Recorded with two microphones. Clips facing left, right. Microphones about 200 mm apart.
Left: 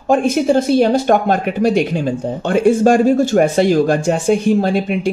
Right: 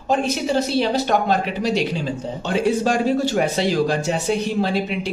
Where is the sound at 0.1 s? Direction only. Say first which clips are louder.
Left 7 dB; 50° left (ahead or behind).